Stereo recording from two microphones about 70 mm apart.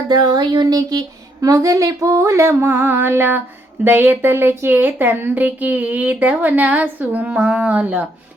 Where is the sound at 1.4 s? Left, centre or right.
Right.